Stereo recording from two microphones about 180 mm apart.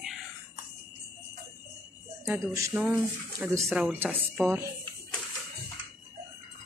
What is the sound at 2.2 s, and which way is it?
Speech, 10° right (ahead or behind).